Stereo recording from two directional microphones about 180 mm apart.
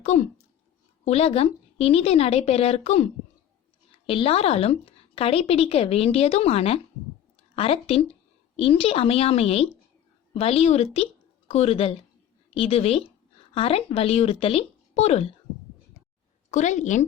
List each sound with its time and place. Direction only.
0.0 s a sound: 40° left (ahead or behind)
1.0 s speech: 35° left (ahead or behind)
16.5 s a woman's voice: 40° left (ahead or behind)